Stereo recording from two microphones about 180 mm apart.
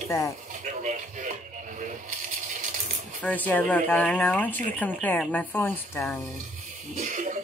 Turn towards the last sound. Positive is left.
turn(degrees=-45)  # may be behind; listen again after turning